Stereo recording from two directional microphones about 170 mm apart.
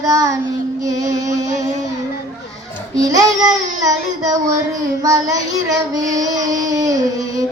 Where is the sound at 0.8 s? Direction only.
20° right (ahead or behind).